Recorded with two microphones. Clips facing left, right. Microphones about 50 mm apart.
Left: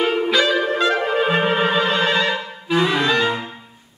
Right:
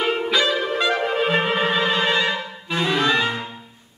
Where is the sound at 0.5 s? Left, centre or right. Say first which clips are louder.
Left 3 dB; centre.